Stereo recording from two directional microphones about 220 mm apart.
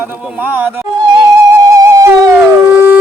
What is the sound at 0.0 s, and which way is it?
Yodeling, 5° right (ahead or behind).